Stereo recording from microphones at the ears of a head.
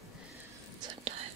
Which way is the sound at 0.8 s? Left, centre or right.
Right.